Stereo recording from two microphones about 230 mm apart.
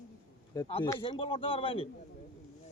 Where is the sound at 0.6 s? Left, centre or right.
Left.